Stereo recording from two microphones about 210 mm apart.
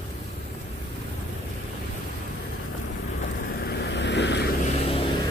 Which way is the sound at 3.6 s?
55° left (ahead or behind).